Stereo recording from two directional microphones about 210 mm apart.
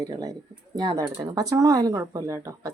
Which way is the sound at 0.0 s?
15° right (ahead or behind).